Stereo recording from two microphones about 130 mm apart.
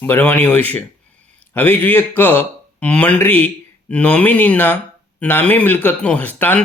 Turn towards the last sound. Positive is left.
turn(degrees=15)  # may be behind; listen again after turning